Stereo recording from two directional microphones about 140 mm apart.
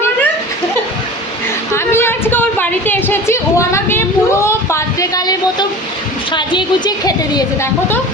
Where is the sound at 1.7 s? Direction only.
15° left (ahead or behind).